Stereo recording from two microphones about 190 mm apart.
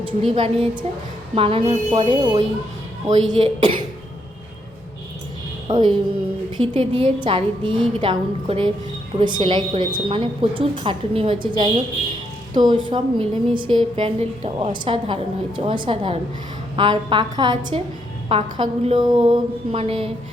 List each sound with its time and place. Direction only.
0.0 s a woman's voice: 25° right (ahead or behind)
5.6 s a woman's voice: 25° right (ahead or behind)